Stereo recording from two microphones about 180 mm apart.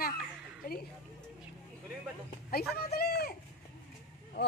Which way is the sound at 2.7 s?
60° left (ahead or behind).